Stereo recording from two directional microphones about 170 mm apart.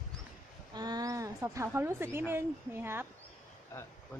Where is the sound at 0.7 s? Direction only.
25° right (ahead or behind).